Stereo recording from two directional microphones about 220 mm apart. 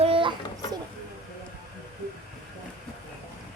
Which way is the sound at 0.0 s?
25° right (ahead or behind).